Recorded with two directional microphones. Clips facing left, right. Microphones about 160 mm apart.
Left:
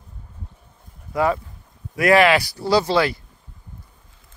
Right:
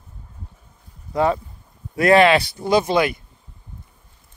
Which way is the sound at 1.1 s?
25° right (ahead or behind).